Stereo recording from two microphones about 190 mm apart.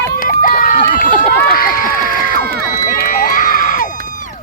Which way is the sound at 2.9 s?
50° left (ahead or behind).